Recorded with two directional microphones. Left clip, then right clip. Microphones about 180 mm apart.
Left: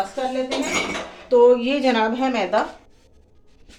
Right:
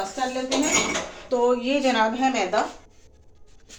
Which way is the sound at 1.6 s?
55° left (ahead or behind).